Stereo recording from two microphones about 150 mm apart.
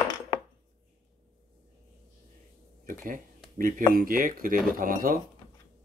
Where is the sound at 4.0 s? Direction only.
65° right (ahead or behind).